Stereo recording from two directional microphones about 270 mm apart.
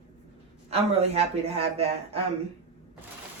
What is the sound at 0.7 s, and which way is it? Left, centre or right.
A man's voice, right.